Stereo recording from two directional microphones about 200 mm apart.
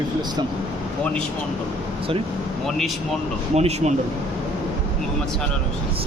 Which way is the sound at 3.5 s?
30° right (ahead or behind).